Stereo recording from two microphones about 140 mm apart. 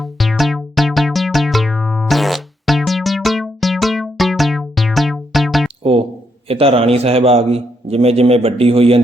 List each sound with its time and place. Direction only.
0.0 s music: centre (ahead or behind)
5.8 s a sound: 40° right (ahead or behind)
6.5 s a man's voice: 45° right (ahead or behind)